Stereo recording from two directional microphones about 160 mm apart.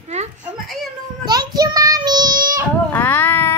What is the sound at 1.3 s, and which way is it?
Child singing, 25° right (ahead or behind).